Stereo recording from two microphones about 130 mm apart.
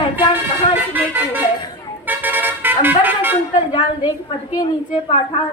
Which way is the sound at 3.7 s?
40° left (ahead or behind).